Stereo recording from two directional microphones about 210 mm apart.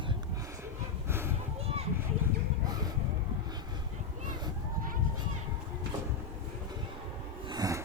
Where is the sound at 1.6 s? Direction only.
30° right (ahead or behind).